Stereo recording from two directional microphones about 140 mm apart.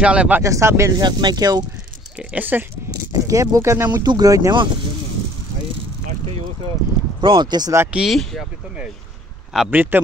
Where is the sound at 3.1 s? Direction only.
25° right (ahead or behind).